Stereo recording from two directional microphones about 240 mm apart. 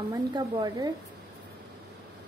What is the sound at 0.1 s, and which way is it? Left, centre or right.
Speech, centre.